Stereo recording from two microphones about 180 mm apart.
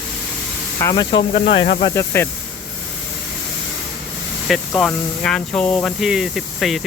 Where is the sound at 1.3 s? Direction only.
45° left (ahead or behind).